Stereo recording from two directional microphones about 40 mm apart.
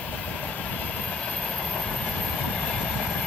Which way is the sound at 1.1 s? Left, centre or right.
Centre.